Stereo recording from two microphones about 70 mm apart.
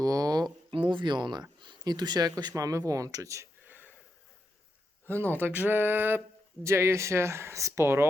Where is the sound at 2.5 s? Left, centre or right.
Right.